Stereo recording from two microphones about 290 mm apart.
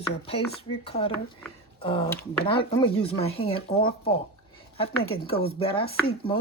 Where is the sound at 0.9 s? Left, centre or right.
Centre.